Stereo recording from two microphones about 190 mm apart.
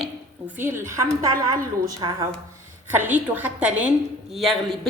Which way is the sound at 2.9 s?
10° right (ahead or behind).